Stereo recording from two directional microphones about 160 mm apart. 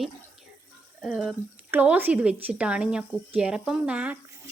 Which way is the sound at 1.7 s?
10° right (ahead or behind).